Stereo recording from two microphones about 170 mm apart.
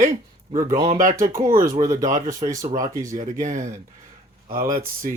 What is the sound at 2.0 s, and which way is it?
Speech, 50° right (ahead or behind).